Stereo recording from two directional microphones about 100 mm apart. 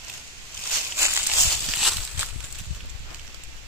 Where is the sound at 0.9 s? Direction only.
25° right (ahead or behind).